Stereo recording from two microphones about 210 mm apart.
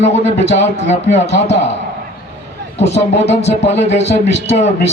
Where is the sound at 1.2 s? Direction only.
55° left (ahead or behind).